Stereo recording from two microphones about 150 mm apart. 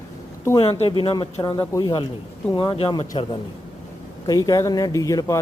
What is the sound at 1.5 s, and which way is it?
Speech, 20° left (ahead or behind).